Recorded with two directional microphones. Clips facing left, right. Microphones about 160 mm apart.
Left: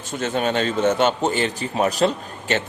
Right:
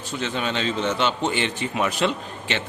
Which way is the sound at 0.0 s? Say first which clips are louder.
Left 4 dB; 45° left (ahead or behind).